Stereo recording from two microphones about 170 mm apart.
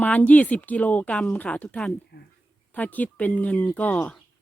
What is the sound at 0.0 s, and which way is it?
Speech, 10° left (ahead or behind).